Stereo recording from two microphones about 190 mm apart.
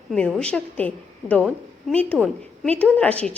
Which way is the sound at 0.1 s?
5° left (ahead or behind).